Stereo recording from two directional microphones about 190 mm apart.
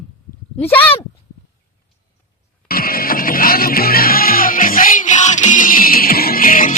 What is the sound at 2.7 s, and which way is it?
Music, 50° left (ahead or behind).